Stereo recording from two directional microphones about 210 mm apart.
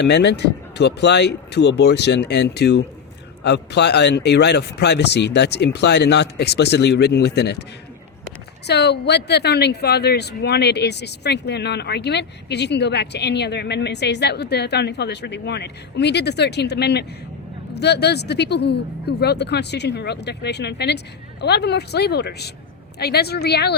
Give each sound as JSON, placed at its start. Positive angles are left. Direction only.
{"t": 0.0, "sound": "speech", "side_deg": 55}
{"t": 8.6, "sound": "speech", "side_deg": 50}